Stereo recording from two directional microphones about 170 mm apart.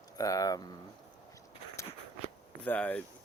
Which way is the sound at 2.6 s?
10° left (ahead or behind).